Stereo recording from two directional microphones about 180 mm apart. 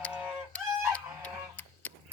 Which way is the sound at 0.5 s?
5° left (ahead or behind).